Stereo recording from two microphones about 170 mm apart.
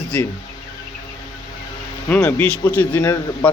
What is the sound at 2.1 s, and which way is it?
A man's voice, 10° left (ahead or behind).